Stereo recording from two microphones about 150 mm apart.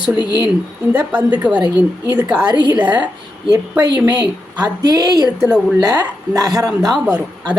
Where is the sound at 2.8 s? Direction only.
10° right (ahead or behind).